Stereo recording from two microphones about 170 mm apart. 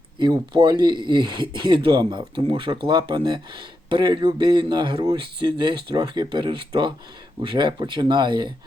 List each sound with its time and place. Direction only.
0.2 s speech: 25° right (ahead or behind)